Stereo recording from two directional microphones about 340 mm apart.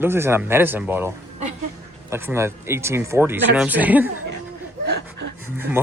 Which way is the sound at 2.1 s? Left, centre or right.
Centre.